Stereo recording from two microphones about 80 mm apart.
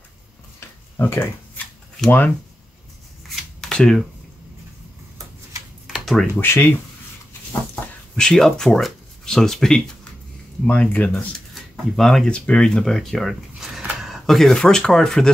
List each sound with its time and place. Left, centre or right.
0.6 s a sound: left
2.0 s speech: left
3.6 s camera: centre
5.9 s a sound: centre
6.4 s speech: left
8.2 s speech: centre
11.1 s speech: centre